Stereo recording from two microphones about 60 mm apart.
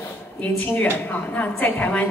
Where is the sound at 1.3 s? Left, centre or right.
Left.